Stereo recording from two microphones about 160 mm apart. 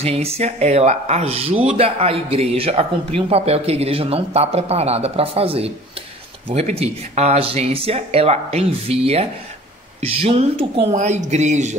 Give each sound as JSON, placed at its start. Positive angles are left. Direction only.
{"t": 0.0, "sound": "speech", "side_deg": -40}